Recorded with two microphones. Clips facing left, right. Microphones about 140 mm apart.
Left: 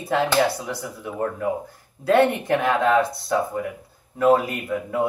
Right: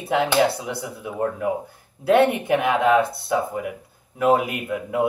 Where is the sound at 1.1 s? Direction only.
5° right (ahead or behind).